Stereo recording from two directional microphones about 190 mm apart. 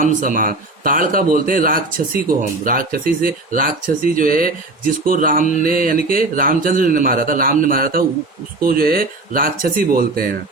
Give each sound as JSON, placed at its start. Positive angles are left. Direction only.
{"t": 0.0, "sound": "speech", "side_deg": -45}